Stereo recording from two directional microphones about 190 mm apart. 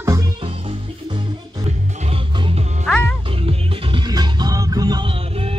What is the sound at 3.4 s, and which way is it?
Music, 25° right (ahead or behind).